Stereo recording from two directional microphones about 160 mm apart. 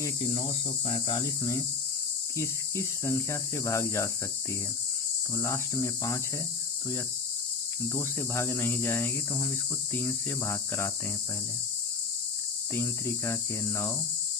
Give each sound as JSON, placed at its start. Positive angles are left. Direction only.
{"t": 0.2, "sound": "cricket", "side_deg": 35}
{"t": 2.4, "sound": "speech", "side_deg": 20}
{"t": 5.3, "sound": "speech", "side_deg": 20}
{"t": 7.9, "sound": "speech", "side_deg": 20}
{"t": 12.7, "sound": "speech", "side_deg": 15}